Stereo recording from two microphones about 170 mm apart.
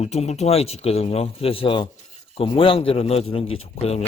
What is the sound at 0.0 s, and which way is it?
Speech, 40° left (ahead or behind).